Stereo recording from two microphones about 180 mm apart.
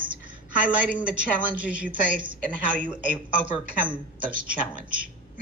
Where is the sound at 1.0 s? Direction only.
5° right (ahead or behind).